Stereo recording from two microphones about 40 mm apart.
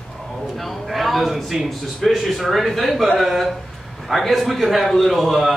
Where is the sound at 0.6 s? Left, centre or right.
Centre.